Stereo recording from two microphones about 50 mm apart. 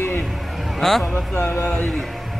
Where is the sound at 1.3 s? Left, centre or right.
Left.